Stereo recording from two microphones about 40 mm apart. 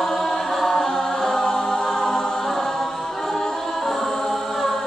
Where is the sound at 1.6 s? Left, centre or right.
Centre.